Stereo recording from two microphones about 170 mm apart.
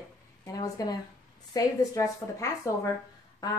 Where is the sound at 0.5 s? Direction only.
20° left (ahead or behind).